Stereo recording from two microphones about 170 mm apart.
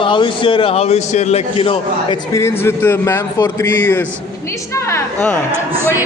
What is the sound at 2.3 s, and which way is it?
A man's voice, 15° left (ahead or behind).